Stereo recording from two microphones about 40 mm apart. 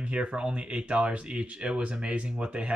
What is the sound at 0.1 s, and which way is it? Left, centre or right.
Speech, right.